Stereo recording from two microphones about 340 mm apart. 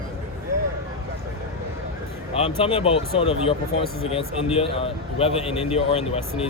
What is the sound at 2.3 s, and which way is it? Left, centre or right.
A man's voice, centre.